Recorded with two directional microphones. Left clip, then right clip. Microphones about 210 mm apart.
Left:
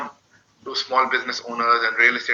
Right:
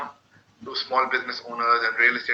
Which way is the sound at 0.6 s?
15° left (ahead or behind).